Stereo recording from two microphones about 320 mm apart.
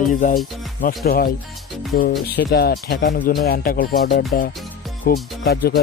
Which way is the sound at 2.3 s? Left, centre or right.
Left.